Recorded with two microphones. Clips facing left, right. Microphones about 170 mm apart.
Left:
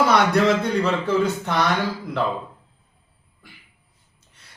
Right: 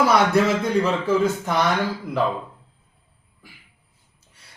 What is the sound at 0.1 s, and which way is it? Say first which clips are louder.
A man's voice: even; 5° right (ahead or behind).